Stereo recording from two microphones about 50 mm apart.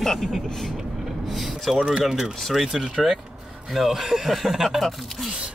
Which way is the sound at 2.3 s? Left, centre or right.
Centre.